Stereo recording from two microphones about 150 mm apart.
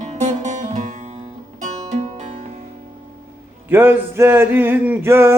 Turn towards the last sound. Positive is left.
turn(degrees=-15)  # may be behind; listen again after turning